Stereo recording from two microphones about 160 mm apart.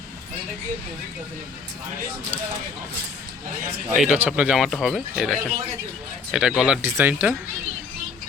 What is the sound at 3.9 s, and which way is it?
Speech, 5° right (ahead or behind).